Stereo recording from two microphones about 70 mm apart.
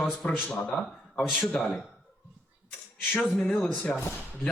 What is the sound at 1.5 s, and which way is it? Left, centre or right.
Speech, centre.